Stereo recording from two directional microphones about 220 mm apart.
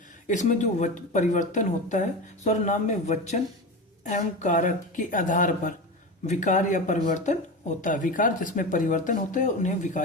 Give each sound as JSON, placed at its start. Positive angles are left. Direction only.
{"t": 0.3, "sound": "speech", "side_deg": 35}